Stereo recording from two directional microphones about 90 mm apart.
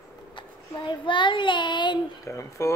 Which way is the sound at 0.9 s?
65° left (ahead or behind).